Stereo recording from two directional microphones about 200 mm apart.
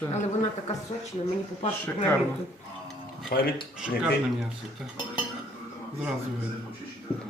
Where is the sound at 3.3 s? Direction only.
50° left (ahead or behind).